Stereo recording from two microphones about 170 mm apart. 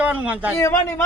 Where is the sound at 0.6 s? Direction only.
15° left (ahead or behind).